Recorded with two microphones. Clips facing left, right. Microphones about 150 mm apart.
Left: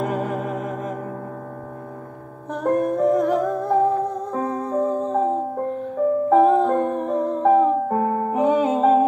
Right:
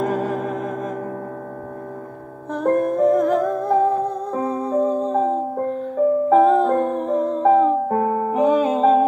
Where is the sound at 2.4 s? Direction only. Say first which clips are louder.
Right 2 dB; 20° left (ahead or behind).